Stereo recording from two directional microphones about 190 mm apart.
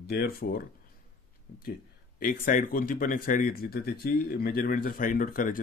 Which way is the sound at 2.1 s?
45° left (ahead or behind).